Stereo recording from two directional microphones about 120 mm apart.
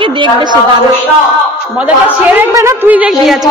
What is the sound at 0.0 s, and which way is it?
Speech, 40° right (ahead or behind).